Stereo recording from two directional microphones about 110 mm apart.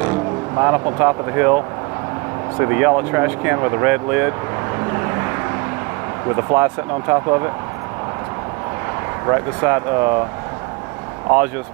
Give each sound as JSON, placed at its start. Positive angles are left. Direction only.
{"t": 0.0, "sound": "speech", "side_deg": -25}
{"t": 2.6, "sound": "speech", "side_deg": -20}
{"t": 4.7, "sound": "vehicle", "side_deg": -25}
{"t": 6.3, "sound": "speech", "side_deg": -25}
{"t": 9.2, "sound": "speech", "side_deg": -20}